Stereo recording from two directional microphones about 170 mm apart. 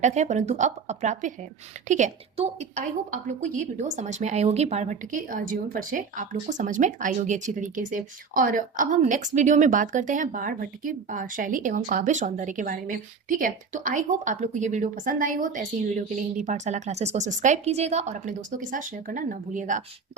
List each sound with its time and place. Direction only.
0.0 s a woman's voice: 45° right (ahead or behind)